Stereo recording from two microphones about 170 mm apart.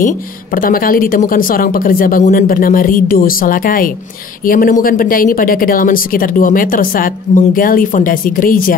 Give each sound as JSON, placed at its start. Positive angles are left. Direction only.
{"t": 0.6, "sound": "speech", "side_deg": 55}